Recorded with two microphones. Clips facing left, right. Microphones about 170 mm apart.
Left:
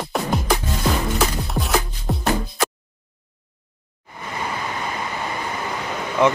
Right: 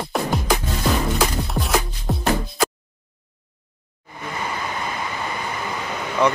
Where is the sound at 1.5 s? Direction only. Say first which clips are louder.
Even; centre (ahead or behind).